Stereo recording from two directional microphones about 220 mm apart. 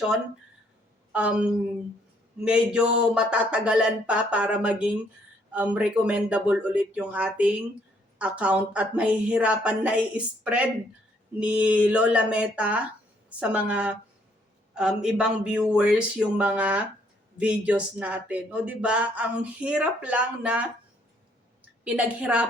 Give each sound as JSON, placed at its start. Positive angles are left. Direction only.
{"t": 1.1, "sound": "speech", "side_deg": -5}
{"t": 21.8, "sound": "speech", "side_deg": -5}